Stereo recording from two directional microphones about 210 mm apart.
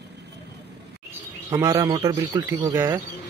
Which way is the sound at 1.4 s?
15° right (ahead or behind).